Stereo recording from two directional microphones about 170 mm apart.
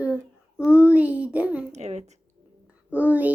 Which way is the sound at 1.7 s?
40° right (ahead or behind).